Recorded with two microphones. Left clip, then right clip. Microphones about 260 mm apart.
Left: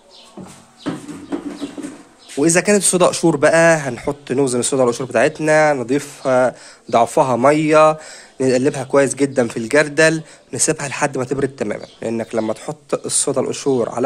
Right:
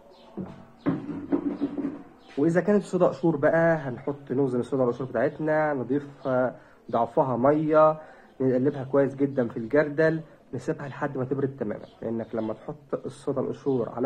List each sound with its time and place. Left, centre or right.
2.3 s speech: left
2.6 s speech: left
3.3 s speech: left
4.5 s speech: left